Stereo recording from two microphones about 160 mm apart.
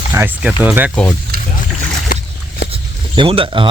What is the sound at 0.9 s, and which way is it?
Speech, 10° left (ahead or behind).